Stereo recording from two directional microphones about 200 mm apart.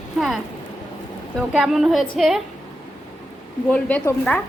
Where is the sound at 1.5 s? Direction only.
5° right (ahead or behind).